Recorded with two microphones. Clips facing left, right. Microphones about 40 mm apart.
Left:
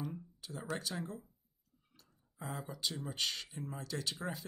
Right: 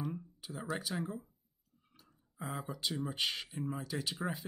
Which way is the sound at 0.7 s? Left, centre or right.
Centre.